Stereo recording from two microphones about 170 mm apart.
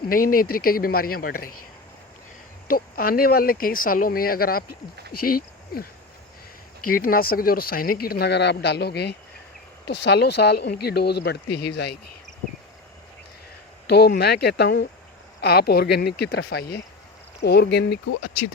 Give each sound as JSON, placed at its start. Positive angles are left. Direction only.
{"t": 0.1, "sound": "speech", "side_deg": 55}
{"t": 2.6, "sound": "speech", "side_deg": 60}
{"t": 13.8, "sound": "speech", "side_deg": 75}